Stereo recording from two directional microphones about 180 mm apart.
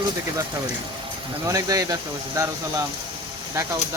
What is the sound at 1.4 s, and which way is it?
Speech, 20° right (ahead or behind).